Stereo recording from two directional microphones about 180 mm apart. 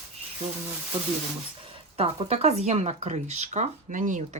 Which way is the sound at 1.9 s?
35° right (ahead or behind).